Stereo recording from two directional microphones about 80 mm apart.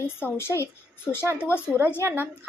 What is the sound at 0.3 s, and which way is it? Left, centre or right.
Speech, left.